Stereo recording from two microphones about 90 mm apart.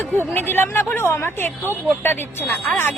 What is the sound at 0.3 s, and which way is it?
A woman's voice, 25° left (ahead or behind).